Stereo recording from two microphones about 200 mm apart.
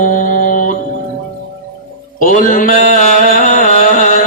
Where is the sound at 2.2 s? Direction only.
40° left (ahead or behind).